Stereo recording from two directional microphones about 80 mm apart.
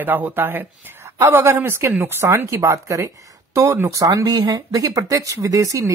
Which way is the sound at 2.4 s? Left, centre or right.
Right.